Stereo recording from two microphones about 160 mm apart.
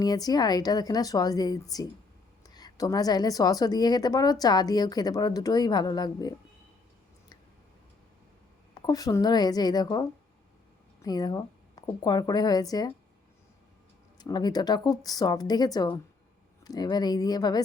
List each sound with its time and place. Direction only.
0.0 s a woman's voice: 25° left (ahead or behind)
8.7 s a woman's voice: 25° left (ahead or behind)
14.2 s a woman's voice: 25° left (ahead or behind)